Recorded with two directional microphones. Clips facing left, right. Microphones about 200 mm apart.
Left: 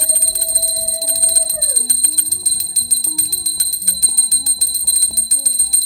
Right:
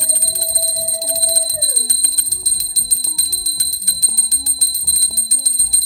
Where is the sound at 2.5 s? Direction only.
60° left (ahead or behind).